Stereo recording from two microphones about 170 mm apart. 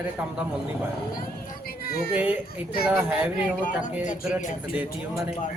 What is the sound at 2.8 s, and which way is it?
Speech, 10° right (ahead or behind).